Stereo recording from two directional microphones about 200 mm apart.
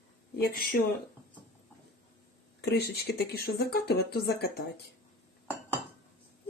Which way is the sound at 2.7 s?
55° left (ahead or behind).